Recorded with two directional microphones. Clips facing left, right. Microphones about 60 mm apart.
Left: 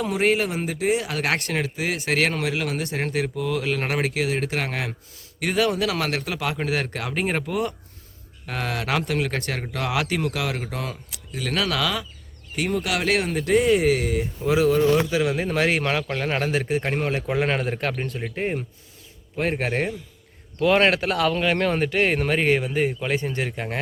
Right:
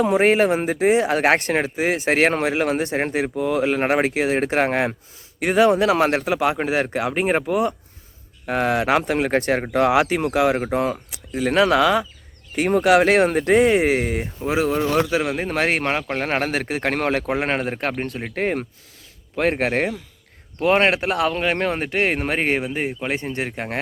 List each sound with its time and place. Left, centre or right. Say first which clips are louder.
0.0 s speech: right 6 dB; right
12.5 s speech: right 9 dB; right
14.8 s a man's voice: even; right
15.2 s speech: even; right
15.8 s speech: right 2 dB; right
16.2 s speech: right 2 dB; right
17.2 s speech: right 1 dB; right
18.3 s speech: right 4 dB; right
19.4 s a man's voice: right 4 dB; right
20.6 s speech: right 1 dB; right